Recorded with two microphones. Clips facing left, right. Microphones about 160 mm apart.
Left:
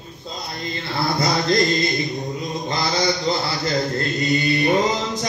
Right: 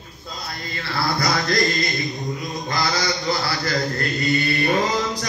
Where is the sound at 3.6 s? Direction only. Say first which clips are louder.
Left 2 dB; 25° left (ahead or behind).